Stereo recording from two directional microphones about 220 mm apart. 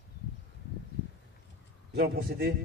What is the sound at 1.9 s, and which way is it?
Speech, 45° right (ahead or behind).